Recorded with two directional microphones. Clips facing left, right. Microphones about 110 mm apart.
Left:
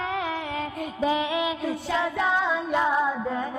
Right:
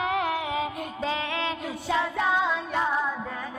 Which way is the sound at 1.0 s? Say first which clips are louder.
Left 5 dB; 15° left (ahead or behind).